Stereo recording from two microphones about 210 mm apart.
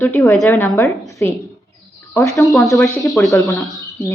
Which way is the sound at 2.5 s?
Centre (ahead or behind).